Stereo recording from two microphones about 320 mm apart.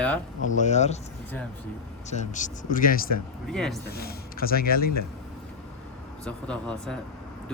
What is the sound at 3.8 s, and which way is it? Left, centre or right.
Speech, left.